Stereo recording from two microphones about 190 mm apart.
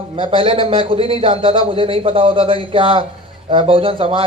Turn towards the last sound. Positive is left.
turn(degrees=-30)  # may be behind; listen again after turning